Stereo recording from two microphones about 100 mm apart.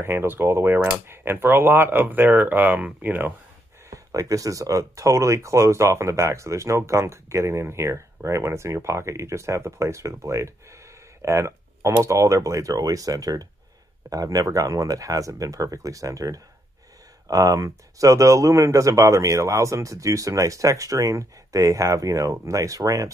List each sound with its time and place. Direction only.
0.0 s speech: 25° right (ahead or behind)
3.9 s speech: 35° right (ahead or behind)